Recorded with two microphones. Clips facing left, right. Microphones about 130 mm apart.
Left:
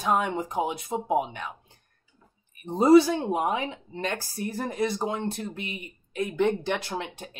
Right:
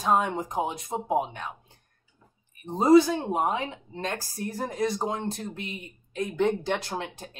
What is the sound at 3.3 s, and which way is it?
Speech, 10° left (ahead or behind).